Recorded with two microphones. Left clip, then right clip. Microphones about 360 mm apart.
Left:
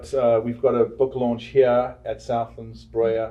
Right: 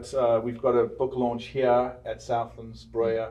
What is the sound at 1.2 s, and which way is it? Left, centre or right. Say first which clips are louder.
Speech: left 4 dB; left.